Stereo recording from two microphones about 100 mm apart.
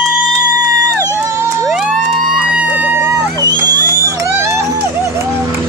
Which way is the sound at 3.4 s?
40° right (ahead or behind).